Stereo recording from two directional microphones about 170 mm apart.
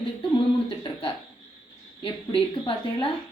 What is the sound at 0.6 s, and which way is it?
A woman's voice, 30° left (ahead or behind).